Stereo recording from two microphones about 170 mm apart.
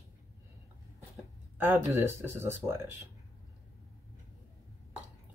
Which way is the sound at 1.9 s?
15° right (ahead or behind).